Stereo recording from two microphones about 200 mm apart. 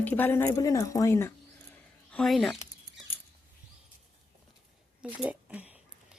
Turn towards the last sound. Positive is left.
turn(degrees=-5)  # may be behind; listen again after turning